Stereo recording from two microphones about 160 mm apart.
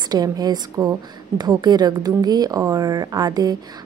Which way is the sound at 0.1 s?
25° right (ahead or behind).